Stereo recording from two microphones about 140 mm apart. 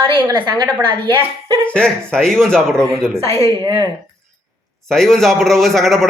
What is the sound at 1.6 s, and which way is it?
A man's voice, 5° left (ahead or behind).